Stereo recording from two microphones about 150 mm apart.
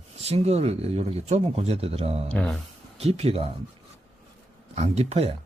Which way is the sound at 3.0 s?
45° right (ahead or behind).